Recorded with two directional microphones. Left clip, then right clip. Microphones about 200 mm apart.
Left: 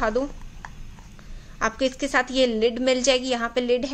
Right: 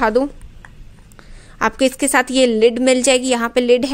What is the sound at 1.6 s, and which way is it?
A woman's voice, 50° right (ahead or behind).